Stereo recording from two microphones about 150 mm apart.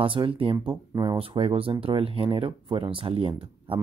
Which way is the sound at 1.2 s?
35° right (ahead or behind).